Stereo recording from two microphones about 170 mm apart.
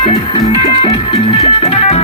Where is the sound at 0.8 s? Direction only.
35° left (ahead or behind).